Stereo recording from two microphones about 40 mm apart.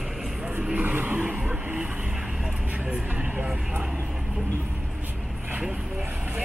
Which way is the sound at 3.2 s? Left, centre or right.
Right.